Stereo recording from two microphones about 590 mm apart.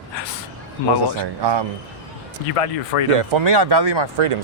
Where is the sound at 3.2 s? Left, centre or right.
Right.